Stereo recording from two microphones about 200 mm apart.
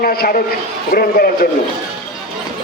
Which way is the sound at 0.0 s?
50° left (ahead or behind).